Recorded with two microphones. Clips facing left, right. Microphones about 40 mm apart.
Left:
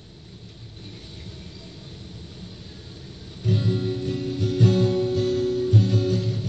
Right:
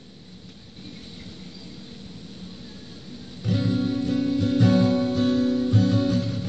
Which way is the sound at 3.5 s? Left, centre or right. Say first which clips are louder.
Right 1 dB; centre.